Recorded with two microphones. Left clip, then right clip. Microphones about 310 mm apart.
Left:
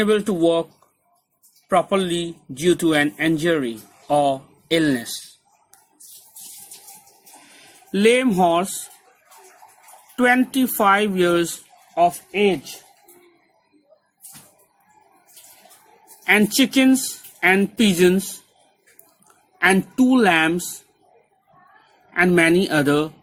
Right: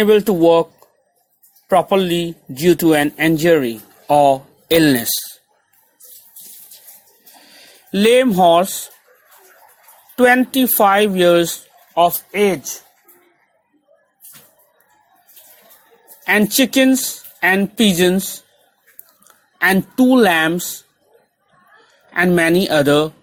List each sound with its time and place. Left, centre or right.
0.0 s speech: centre
1.7 s speech: centre
7.9 s speech: centre
9.3 s bathtub: centre
10.2 s speech: centre
16.2 s a woman's voice: centre
19.5 s a woman's voice: centre
22.1 s speech: centre